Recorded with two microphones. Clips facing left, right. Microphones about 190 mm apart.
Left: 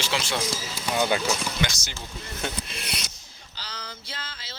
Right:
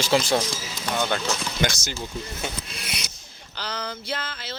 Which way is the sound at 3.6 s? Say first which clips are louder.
Right 9 dB; 60° right (ahead or behind).